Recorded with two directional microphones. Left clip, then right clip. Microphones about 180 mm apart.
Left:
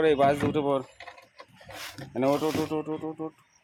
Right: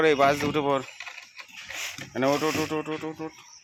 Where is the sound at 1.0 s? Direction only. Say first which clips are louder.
Right 6 dB; 25° left (ahead or behind).